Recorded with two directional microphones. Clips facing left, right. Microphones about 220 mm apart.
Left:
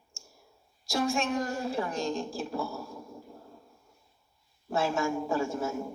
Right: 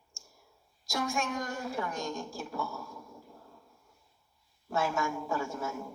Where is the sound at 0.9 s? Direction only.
25° left (ahead or behind).